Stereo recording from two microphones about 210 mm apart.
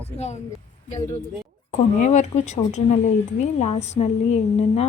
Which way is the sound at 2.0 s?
35° left (ahead or behind).